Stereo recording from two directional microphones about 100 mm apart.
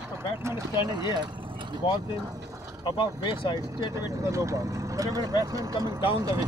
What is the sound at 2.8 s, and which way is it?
Speech, 50° left (ahead or behind).